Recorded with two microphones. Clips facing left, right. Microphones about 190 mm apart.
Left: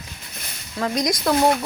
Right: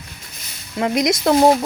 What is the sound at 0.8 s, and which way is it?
Speech, 20° right (ahead or behind).